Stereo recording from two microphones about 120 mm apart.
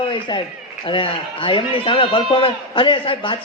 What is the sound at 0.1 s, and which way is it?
A man's voice, 40° left (ahead or behind).